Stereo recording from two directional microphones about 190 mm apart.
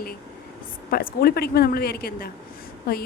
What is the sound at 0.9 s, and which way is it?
A woman's voice, 50° left (ahead or behind).